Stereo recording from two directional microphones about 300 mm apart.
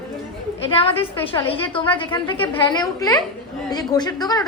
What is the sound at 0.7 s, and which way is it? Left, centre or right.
A woman's voice, centre.